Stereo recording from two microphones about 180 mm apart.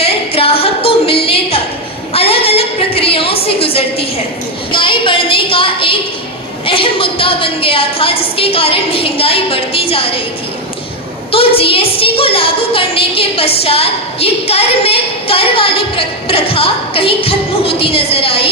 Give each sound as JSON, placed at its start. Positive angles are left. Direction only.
{"t": 0.0, "sound": "singing", "side_deg": 30}
{"t": 2.1, "sound": "a sound", "side_deg": 30}
{"t": 6.7, "sound": "a woman's voice", "side_deg": 30}
{"t": 11.3, "sound": "a woman's voice", "side_deg": 30}